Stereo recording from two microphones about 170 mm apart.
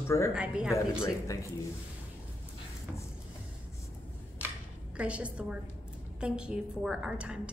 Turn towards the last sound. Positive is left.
turn(degrees=-5)  # may be behind; listen again after turning